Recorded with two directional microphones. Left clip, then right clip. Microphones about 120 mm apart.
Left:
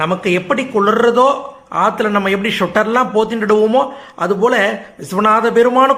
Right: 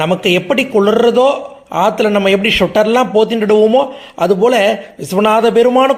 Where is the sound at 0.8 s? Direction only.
25° right (ahead or behind).